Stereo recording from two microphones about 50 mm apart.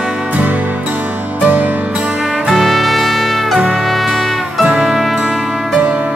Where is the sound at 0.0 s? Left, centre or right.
Centre.